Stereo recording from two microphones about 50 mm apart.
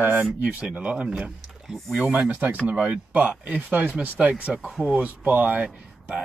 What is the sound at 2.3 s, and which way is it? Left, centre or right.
Speech, right.